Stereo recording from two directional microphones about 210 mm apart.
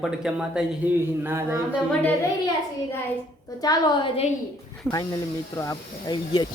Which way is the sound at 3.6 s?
20° left (ahead or behind).